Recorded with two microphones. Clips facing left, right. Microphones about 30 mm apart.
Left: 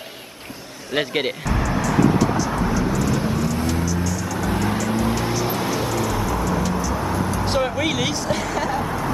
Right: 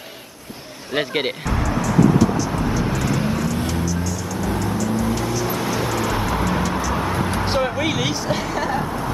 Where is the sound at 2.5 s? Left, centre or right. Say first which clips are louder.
Even; centre.